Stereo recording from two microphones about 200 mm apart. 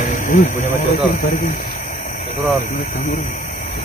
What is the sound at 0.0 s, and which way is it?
Speech, 40° left (ahead or behind).